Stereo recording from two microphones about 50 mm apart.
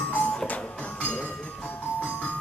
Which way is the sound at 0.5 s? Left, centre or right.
Left.